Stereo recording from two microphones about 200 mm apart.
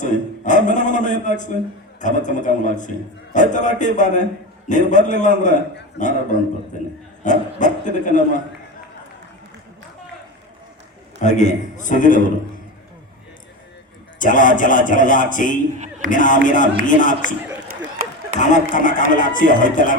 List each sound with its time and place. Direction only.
0.0 s a sound: 40° left (ahead or behind)
2.0 s a man's voice: 40° left (ahead or behind)
7.3 s a man's voice: 40° left (ahead or behind)
11.2 s a man's voice: 35° left (ahead or behind)
14.2 s a man's voice: 40° left (ahead or behind)
17.9 s a sound: 45° right (ahead or behind)
18.3 s a man's voice: 40° left (ahead or behind)